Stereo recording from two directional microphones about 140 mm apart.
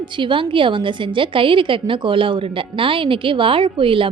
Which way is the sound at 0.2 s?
35° right (ahead or behind).